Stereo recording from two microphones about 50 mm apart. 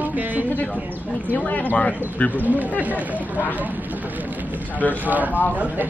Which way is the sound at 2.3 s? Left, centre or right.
Right.